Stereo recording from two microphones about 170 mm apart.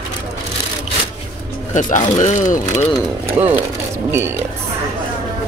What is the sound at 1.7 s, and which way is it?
Speech, 50° left (ahead or behind).